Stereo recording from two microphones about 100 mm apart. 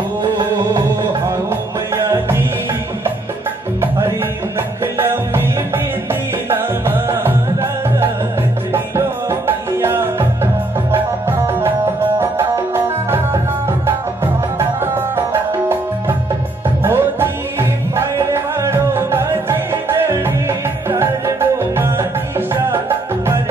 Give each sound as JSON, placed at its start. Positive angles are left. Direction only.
{"t": 0.2, "sound": "music", "side_deg": -50}
{"t": 4.9, "sound": "music", "side_deg": -25}
{"t": 6.5, "sound": "music", "side_deg": -20}